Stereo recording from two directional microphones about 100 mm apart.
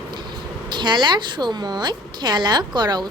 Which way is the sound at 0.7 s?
50° right (ahead or behind).